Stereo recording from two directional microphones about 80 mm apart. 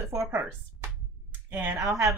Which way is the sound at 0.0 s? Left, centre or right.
Right.